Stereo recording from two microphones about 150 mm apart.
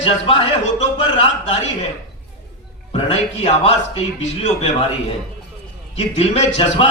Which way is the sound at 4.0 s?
45° left (ahead or behind).